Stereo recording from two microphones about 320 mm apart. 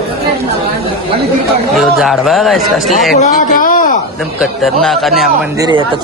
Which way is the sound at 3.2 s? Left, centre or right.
Left.